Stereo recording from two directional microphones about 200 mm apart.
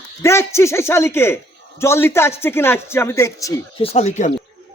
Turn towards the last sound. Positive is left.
turn(degrees=35)  # may be behind; listen again after turning